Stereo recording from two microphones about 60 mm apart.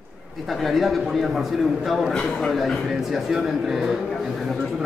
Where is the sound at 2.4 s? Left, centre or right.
Centre.